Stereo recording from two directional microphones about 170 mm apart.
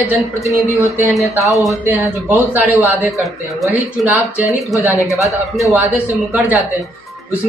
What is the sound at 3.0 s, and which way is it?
Speech, centre (ahead or behind).